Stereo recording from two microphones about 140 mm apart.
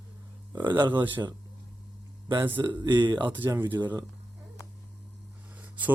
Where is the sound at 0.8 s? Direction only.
35° right (ahead or behind).